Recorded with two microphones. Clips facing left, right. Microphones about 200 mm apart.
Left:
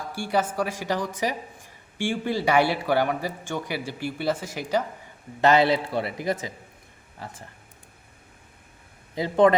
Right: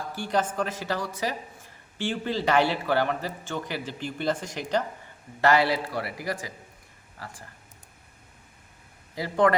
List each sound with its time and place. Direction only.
0.1 s speech: 10° left (ahead or behind)
5.4 s a man's voice: 20° left (ahead or behind)
9.1 s a man's voice: 20° left (ahead or behind)